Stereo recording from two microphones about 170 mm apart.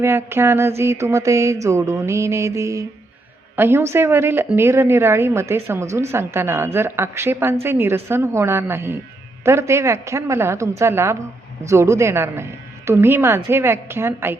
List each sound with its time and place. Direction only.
0.0 s a woman's voice: 15° right (ahead or behind)